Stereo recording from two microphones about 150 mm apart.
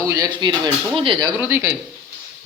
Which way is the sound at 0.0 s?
20° right (ahead or behind).